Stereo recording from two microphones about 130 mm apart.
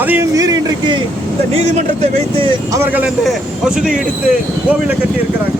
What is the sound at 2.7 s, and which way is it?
A man's voice, 15° right (ahead or behind).